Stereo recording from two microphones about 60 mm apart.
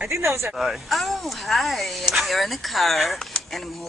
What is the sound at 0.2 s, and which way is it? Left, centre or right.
Speech, right.